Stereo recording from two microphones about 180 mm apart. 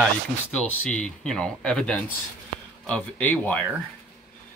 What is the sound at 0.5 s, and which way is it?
Speech, 5° left (ahead or behind).